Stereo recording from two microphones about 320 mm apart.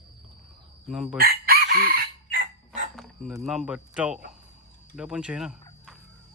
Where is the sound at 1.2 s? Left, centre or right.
Right.